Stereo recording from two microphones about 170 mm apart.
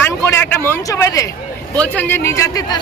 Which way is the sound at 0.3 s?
15° left (ahead or behind).